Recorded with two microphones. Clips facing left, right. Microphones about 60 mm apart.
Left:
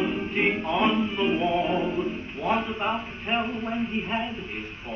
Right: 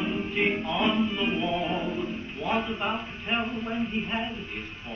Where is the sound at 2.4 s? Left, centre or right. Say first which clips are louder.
Left 2 dB; left.